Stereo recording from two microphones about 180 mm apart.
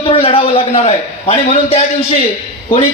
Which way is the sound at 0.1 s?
30° left (ahead or behind).